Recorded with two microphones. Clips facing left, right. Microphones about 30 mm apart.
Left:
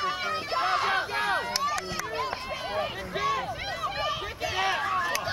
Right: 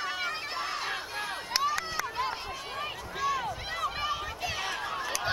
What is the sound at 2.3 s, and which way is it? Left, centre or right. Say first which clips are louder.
Run: left 4 dB; centre.